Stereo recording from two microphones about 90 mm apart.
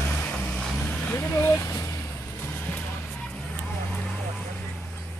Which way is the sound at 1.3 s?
30° left (ahead or behind).